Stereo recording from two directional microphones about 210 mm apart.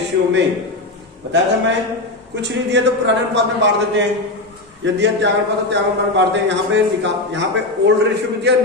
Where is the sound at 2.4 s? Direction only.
55° right (ahead or behind).